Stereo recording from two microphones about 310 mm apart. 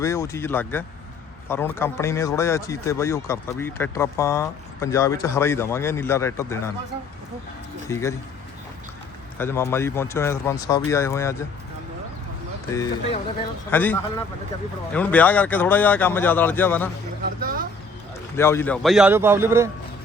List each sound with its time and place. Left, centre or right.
0.0 s speech: centre
7.9 s speech: centre
9.4 s speech: centre
12.7 s speech: centre
17.4 s speech: right
18.3 s speech: centre